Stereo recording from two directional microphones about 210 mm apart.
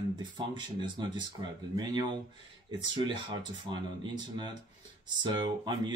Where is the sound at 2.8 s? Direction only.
20° right (ahead or behind).